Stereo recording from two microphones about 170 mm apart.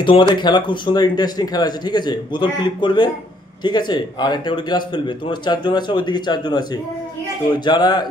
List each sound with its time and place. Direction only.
0.0 s a man's voice: 30° left (ahead or behind)